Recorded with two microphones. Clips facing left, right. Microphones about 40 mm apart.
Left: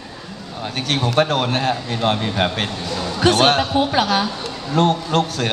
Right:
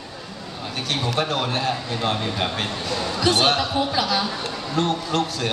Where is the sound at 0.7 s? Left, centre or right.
Left.